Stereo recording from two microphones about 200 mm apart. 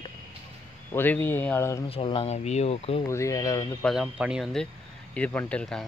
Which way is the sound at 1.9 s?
25° left (ahead or behind).